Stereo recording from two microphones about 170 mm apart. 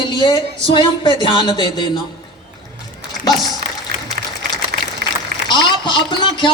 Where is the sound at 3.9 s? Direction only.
70° right (ahead or behind).